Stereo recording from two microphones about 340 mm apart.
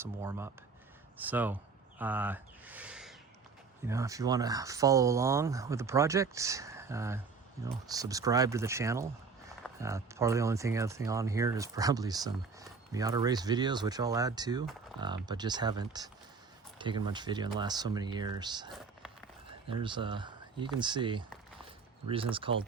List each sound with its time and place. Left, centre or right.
0.0 s speech: centre
19.8 s speech: centre